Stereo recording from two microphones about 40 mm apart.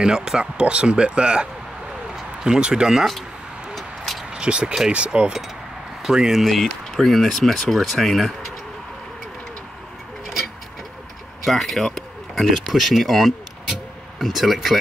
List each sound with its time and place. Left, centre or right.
0.0 s speech: centre
3.7 s vehicle: centre
4.3 s speech: right
6.0 s speech: centre
6.4 s speech: centre
11.4 s speech: centre